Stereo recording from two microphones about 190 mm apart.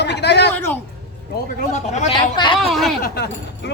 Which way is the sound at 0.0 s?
65° left (ahead or behind).